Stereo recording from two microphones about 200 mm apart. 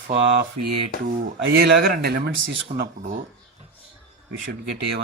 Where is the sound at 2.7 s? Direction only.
50° right (ahead or behind).